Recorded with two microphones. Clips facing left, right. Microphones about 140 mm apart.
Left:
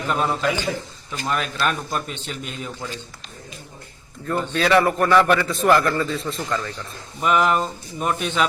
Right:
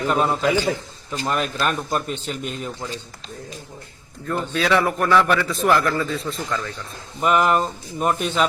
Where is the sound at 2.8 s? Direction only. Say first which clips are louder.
Even; 25° right (ahead or behind).